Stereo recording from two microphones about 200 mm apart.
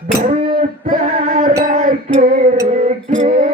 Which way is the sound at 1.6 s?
40° right (ahead or behind).